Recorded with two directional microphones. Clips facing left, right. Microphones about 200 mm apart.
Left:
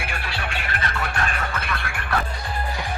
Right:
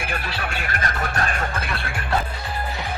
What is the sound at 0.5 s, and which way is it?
Music, 45° right (ahead or behind).